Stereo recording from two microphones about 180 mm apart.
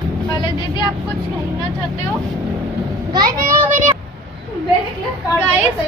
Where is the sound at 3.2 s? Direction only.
20° right (ahead or behind).